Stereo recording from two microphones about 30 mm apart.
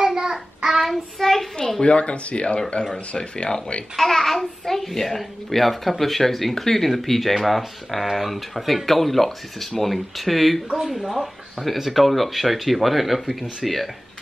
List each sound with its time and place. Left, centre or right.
0.0 s child singing: right
0.8 s a child's voice: centre
1.8 s speech: left
3.2 s speech: left
3.9 s a child's voice: centre
10.8 s speech: centre